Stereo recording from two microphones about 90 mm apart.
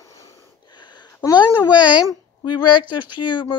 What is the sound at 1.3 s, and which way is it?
Speech, 55° left (ahead or behind).